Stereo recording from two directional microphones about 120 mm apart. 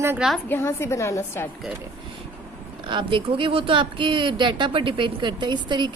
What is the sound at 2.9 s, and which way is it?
Speech, 45° right (ahead or behind).